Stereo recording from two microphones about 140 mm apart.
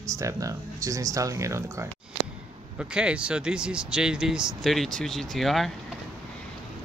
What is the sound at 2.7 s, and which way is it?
Speech, 5° right (ahead or behind).